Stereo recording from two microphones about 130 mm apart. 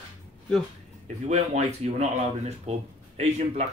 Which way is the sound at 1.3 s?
60° right (ahead or behind).